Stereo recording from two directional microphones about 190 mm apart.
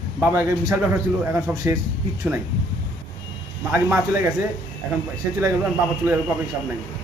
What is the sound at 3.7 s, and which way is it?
Speech, 10° right (ahead or behind).